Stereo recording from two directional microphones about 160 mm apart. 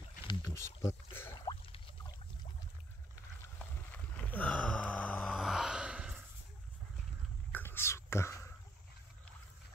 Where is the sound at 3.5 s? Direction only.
10° left (ahead or behind); by 6.1 s 5° right (ahead or behind).